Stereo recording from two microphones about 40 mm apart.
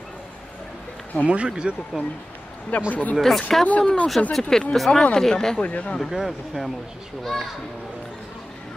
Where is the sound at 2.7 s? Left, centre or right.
Left.